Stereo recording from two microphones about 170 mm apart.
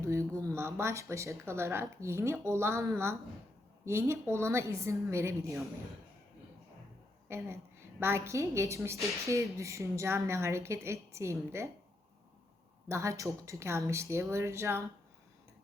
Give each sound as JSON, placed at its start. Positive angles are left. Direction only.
{"t": 0.0, "sound": "a woman's voice", "side_deg": -15}
{"t": 7.3, "sound": "a woman's voice", "side_deg": -15}
{"t": 12.9, "sound": "a woman's voice", "side_deg": -15}